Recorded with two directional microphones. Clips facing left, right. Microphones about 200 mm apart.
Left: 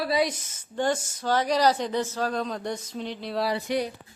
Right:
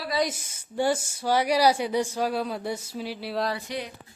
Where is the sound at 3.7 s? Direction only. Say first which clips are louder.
Left 7 dB; 45° left (ahead or behind).